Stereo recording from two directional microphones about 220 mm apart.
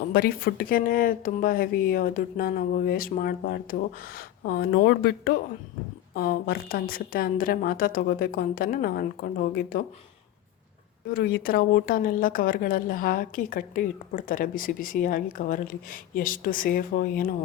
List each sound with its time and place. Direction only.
0.1 s a woman's voice: 45° left (ahead or behind)
11.1 s a woman's voice: 45° left (ahead or behind)